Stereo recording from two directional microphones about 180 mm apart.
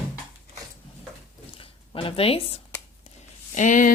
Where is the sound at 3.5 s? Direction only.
45° left (ahead or behind).